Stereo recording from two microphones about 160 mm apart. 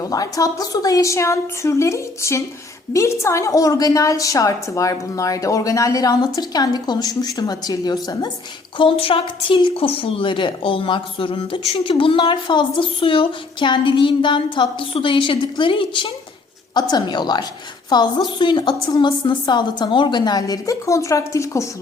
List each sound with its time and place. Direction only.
0.0 s a woman's voice: 20° left (ahead or behind)
8.8 s a woman's voice: 35° left (ahead or behind); by 21.7 s 20° left (ahead or behind)